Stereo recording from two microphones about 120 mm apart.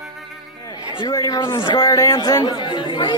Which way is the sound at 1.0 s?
35° left (ahead or behind).